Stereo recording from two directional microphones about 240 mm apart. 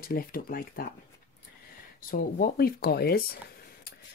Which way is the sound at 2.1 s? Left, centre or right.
Left.